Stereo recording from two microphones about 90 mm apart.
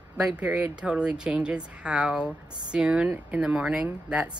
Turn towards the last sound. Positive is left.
turn(degrees=-15)  # may be behind; listen again after turning